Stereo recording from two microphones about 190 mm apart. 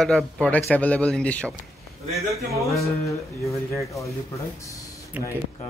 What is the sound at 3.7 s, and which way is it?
Speech, 15° left (ahead or behind).